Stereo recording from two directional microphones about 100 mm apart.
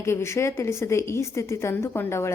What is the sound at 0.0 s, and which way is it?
A woman's voice, 25° left (ahead or behind).